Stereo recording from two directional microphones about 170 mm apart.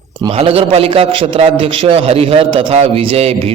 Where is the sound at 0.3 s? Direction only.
35° right (ahead or behind).